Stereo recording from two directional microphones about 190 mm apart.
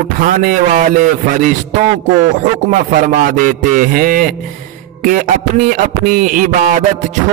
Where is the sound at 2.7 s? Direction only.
45° right (ahead or behind).